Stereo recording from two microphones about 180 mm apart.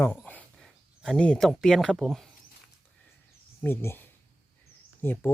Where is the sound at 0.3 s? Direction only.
5° left (ahead or behind).